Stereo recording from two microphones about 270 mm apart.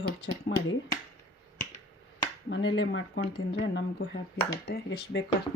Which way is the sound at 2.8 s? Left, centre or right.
Left.